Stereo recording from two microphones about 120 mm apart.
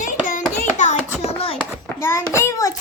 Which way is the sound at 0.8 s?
85° left.